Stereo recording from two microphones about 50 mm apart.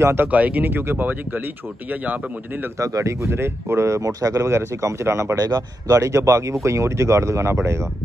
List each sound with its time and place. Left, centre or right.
0.0 s speech: right
0.3 s speech: right
2.8 s speech: right
4.8 s speech: right